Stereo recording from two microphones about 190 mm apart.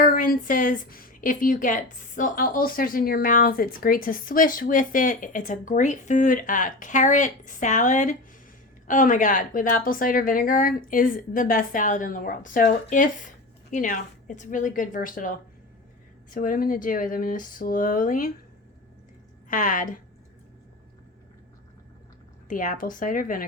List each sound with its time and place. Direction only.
0.0 s a woman's voice: 45° left (ahead or behind)
19.5 s a woman's voice: 45° left (ahead or behind)
22.4 s a woman's voice: 45° left (ahead or behind)